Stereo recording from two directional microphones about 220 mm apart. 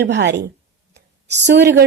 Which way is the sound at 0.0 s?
50° right (ahead or behind).